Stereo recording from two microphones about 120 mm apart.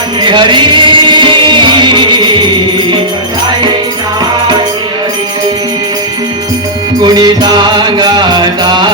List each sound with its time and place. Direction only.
0.2 s music: 40° right (ahead or behind)
7.0 s music: 35° right (ahead or behind)